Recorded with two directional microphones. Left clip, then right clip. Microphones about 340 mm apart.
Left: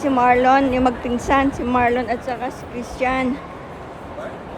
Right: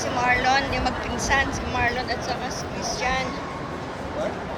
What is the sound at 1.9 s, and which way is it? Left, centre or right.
Speech, centre.